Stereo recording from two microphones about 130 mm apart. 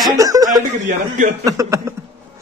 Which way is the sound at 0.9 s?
75° right (ahead or behind).